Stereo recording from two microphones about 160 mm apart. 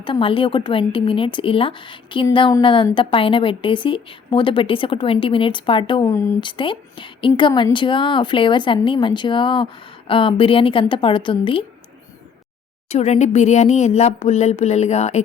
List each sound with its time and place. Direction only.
0.0 s a woman's voice: 35° left (ahead or behind)
6.1 s speech: 20° left (ahead or behind)
6.4 s a woman's voice: 30° left (ahead or behind)
12.9 s speech: 45° left (ahead or behind)